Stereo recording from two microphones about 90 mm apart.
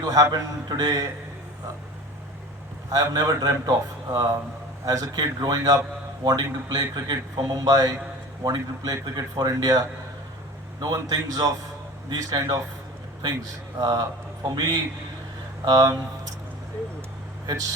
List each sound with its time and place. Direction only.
0.0 s a man's voice: 40° right (ahead or behind)
2.9 s a man's voice: 45° right (ahead or behind)
13.7 s a man's voice: 45° right (ahead or behind)
17.4 s speech: 40° right (ahead or behind)